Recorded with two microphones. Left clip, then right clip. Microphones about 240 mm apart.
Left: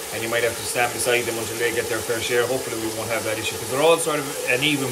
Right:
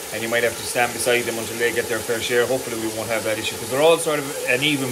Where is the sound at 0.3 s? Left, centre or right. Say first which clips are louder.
Right 2 dB; centre.